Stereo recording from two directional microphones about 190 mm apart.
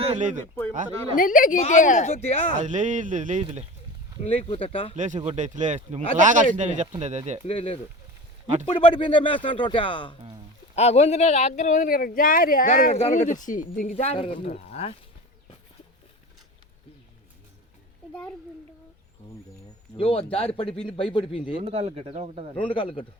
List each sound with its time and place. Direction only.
0.1 s speech: 40° right (ahead or behind)
1.1 s speech: 45° left (ahead or behind)
2.6 s speech: 40° right (ahead or behind)
4.2 s speech: 30° left (ahead or behind)
4.9 s speech: 40° right (ahead or behind)
7.4 s speech: 30° left (ahead or behind)
18.1 s a child's voice: 5° left (ahead or behind)
20.0 s speech: 30° left (ahead or behind)
21.6 s speech: 30° right (ahead or behind)
22.5 s speech: 25° left (ahead or behind)